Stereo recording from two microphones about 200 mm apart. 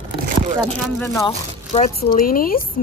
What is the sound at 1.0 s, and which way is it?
Speech, 15° left (ahead or behind).